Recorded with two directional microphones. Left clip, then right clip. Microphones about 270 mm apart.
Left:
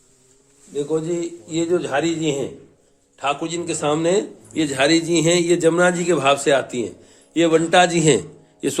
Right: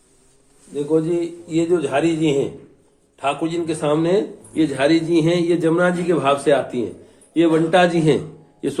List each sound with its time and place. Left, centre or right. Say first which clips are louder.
0.8 s a man's voice: right 3 dB; left